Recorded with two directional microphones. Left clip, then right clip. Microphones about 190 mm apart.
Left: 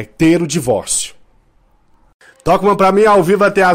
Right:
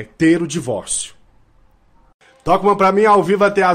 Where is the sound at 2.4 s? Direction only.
35° left (ahead or behind).